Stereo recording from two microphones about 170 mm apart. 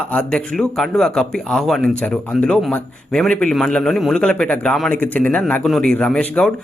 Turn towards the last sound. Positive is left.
turn(degrees=5)  # may be behind; listen again after turning